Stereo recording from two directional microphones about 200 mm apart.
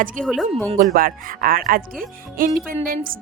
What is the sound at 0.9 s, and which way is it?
Speech, 45° right (ahead or behind).